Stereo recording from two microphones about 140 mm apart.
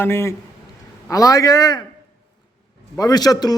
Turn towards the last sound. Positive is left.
turn(degrees=30)  # may be behind; listen again after turning